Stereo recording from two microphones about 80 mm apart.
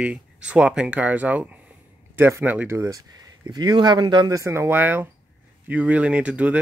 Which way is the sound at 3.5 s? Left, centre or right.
Right.